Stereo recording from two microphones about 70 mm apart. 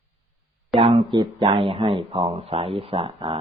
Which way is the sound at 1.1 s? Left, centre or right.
Right.